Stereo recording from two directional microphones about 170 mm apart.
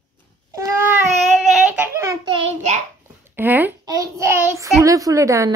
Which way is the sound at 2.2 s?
35° right (ahead or behind).